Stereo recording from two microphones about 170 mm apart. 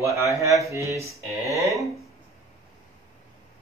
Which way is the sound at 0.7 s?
15° right (ahead or behind).